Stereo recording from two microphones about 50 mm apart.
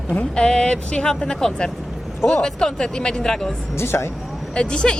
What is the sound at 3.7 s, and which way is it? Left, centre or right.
Speech, left.